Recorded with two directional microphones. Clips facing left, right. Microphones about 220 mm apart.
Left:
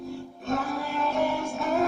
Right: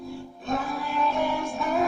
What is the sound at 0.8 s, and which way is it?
Music, 45° left (ahead or behind).